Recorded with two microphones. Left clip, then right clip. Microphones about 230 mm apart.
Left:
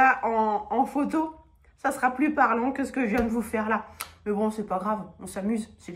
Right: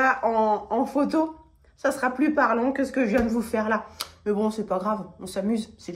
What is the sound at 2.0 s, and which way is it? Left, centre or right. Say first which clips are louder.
Speech: left 1 dB; centre.